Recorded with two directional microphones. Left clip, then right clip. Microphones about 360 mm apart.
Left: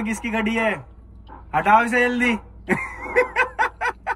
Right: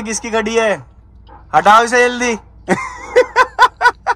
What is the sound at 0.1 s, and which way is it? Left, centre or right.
Speech, right.